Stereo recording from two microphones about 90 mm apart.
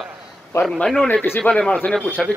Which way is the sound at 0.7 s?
5° left (ahead or behind).